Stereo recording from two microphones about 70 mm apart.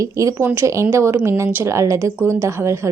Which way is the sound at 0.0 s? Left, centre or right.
Right.